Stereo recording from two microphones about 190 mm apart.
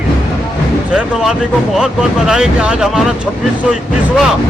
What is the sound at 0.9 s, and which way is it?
Speech, 5° right (ahead or behind).